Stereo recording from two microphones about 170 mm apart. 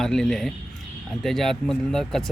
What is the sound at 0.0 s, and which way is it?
Speech, 5° left (ahead or behind).